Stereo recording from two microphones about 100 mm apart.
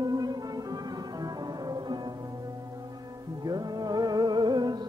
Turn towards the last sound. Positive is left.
turn(degrees=-45)  # may be behind; listen again after turning